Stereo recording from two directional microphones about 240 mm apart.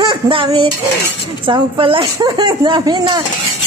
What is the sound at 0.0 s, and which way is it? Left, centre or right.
Speech, centre.